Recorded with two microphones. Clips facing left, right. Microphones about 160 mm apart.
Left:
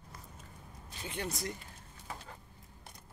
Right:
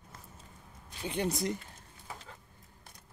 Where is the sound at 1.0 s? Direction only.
20° right (ahead or behind).